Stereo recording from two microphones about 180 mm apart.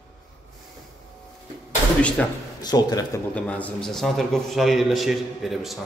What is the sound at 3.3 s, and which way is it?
A man's voice, 5° left (ahead or behind).